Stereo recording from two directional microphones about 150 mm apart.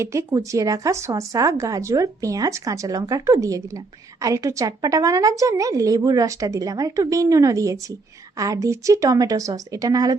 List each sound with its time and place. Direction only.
0.0 s a woman's voice: 20° right (ahead or behind)